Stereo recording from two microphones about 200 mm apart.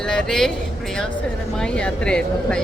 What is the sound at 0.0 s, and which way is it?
Speech, 5° left (ahead or behind).